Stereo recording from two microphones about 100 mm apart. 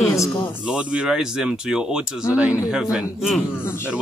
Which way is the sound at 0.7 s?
10° right (ahead or behind).